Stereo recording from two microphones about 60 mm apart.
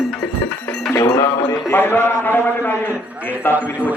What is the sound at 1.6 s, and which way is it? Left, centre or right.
A man's voice, left.